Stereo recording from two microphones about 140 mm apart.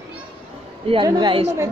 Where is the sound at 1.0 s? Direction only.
30° right (ahead or behind).